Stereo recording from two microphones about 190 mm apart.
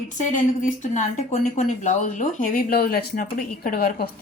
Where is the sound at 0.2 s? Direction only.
40° left (ahead or behind).